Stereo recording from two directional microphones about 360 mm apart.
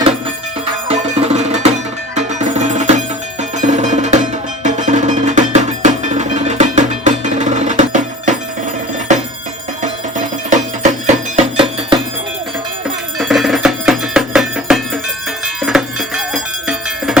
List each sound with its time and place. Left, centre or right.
0.9 s music: centre
9.8 s music: right
13.1 s music: centre